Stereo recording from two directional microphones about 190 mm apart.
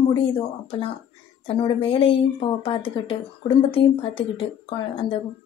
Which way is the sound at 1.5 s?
30° left (ahead or behind).